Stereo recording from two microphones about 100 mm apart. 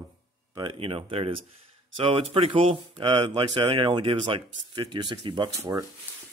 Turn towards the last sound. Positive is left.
turn(degrees=-40)  # may be behind; listen again after turning